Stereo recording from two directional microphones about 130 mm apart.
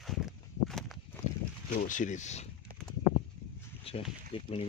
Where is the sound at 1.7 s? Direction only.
85° left; by 2.5 s 60° left (ahead or behind).